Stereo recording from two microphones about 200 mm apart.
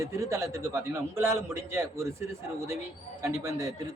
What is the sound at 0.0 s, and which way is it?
A man's voice, 15° right (ahead or behind).